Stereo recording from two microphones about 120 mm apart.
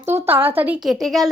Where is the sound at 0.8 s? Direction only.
Centre (ahead or behind).